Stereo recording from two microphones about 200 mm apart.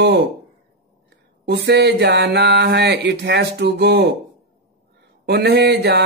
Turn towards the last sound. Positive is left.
turn(degrees=-55)  # may be behind; listen again after turning